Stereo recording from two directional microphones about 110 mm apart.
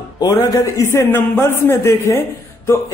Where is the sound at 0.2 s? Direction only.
35° left (ahead or behind).